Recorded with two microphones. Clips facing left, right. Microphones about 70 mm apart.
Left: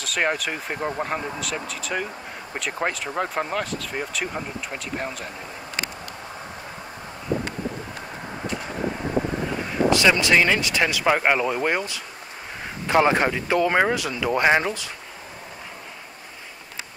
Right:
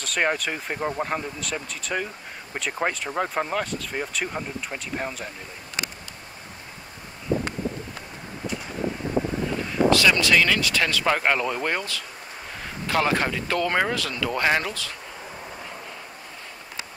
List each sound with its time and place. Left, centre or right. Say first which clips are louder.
0.0 s speech: even; centre
9.7 s speech: left 1 dB; left